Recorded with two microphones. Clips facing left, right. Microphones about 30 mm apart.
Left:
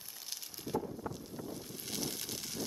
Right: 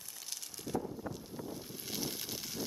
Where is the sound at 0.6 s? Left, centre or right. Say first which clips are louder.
Left 1 dB; centre.